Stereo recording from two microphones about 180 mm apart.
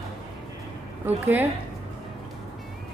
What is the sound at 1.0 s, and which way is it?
Speech, 10° right (ahead or behind).